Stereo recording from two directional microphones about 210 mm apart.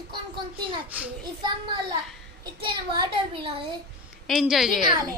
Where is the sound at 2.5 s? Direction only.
25° right (ahead or behind).